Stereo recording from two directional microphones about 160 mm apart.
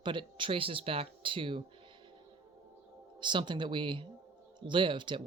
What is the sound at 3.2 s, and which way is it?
Speech, 30° right (ahead or behind).